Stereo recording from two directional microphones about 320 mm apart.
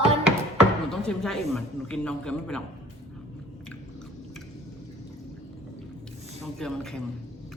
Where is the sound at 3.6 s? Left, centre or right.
Centre.